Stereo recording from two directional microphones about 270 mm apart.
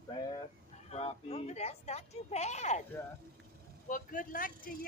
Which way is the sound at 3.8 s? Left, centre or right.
Left.